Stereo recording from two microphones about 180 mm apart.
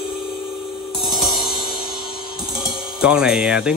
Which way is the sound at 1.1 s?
Centre (ahead or behind).